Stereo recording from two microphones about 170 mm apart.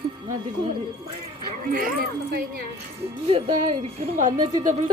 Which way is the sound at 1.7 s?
60° right (ahead or behind).